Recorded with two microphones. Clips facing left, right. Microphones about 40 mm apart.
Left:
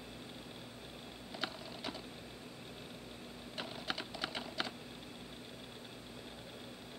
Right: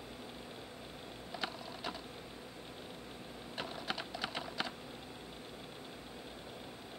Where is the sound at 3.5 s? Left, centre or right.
Centre.